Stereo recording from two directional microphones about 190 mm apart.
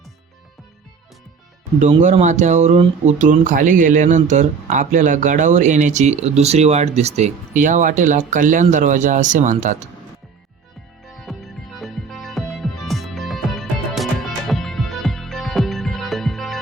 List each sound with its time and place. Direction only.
2.0 s speech: 40° right (ahead or behind)
11.3 s music: centre (ahead or behind)